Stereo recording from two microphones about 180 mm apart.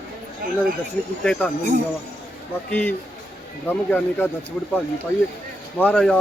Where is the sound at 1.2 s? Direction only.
5° left (ahead or behind).